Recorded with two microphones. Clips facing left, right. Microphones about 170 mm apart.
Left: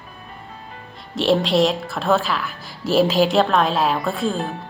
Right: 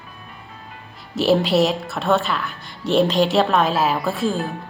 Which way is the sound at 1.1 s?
Centre (ahead or behind).